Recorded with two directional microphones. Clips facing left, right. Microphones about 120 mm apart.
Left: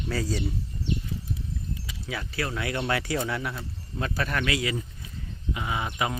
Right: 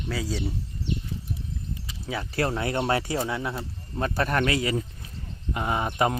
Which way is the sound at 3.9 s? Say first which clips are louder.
Right 4 dB; 35° right (ahead or behind).